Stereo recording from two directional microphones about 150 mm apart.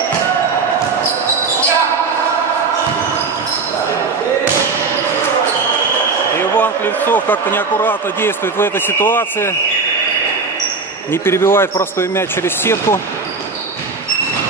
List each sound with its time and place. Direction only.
6.6 s speech: 10° left (ahead or behind)
11.2 s speech: 15° left (ahead or behind)